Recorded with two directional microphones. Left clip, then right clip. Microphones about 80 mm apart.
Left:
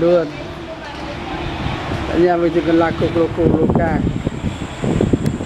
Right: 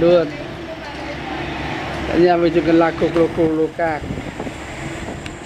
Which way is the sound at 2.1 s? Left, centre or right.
Centre.